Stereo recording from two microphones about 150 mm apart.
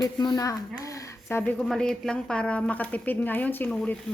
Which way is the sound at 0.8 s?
20° left (ahead or behind).